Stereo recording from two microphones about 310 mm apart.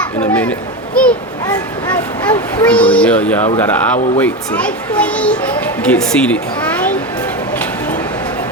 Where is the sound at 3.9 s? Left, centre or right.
Left.